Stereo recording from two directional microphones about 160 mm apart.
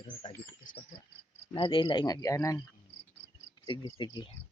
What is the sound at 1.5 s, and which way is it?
Speech, 30° left (ahead or behind).